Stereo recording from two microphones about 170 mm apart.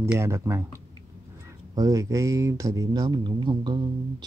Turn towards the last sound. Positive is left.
turn(degrees=-25)  # may be behind; listen again after turning